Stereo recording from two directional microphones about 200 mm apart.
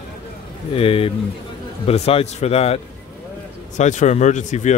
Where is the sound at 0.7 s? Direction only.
30° left (ahead or behind).